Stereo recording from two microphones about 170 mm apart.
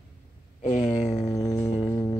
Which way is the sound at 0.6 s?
45° left (ahead or behind).